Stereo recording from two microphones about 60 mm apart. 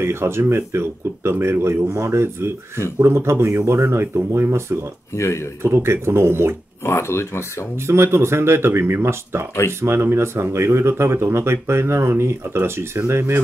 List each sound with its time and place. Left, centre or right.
0.0 s speech: right
5.1 s speech: left
5.6 s speech: right
6.9 s speech: left
7.8 s speech: right